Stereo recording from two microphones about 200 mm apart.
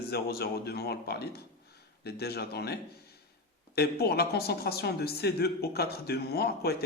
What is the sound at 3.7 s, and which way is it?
Speech, 55° left (ahead or behind).